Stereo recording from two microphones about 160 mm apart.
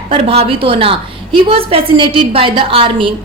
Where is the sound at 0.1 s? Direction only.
35° right (ahead or behind).